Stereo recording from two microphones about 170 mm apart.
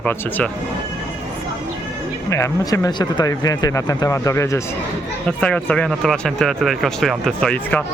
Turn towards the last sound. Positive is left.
turn(degrees=5)  # may be behind; listen again after turning